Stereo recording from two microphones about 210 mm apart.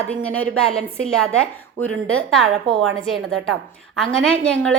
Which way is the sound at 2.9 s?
75° right (ahead or behind).